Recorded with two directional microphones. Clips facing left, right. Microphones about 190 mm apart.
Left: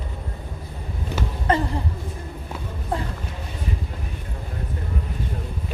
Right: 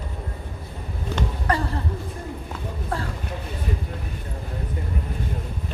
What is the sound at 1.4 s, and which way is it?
Speech, 20° left (ahead or behind).